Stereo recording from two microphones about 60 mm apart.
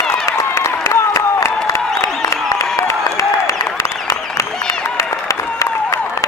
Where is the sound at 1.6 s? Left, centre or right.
Left.